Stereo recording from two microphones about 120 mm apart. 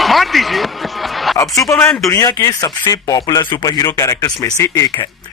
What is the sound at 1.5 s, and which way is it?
A man's voice, 25° left (ahead or behind).